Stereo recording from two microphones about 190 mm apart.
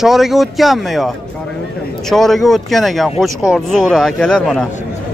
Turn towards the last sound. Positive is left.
turn(degrees=5)  # may be behind; listen again after turning